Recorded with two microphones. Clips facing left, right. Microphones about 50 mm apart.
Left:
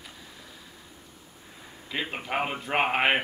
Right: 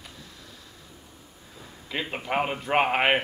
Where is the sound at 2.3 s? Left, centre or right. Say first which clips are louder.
Right 3 dB; centre.